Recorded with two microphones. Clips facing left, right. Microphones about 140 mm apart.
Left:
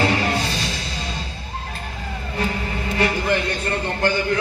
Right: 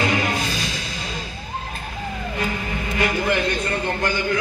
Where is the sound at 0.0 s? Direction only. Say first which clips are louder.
Left 2 dB; 35° left (ahead or behind).